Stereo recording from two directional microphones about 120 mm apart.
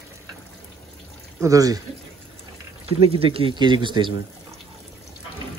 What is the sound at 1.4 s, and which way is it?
Speech, 30° right (ahead or behind).